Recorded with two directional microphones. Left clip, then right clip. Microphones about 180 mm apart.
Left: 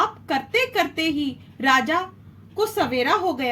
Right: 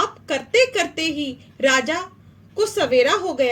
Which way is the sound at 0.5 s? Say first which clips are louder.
Right 5 dB; 30° right (ahead or behind).